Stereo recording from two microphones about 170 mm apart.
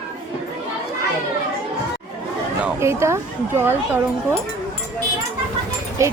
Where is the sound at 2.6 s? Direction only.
15° right (ahead or behind).